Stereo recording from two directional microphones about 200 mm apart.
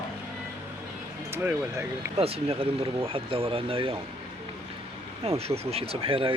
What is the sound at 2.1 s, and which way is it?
Speech, 30° right (ahead or behind).